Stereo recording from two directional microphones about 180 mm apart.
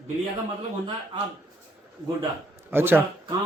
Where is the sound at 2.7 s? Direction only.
10° right (ahead or behind).